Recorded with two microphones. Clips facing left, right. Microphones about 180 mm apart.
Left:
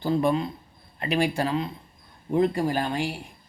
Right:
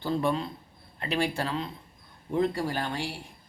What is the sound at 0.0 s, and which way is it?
Speech, 15° left (ahead or behind).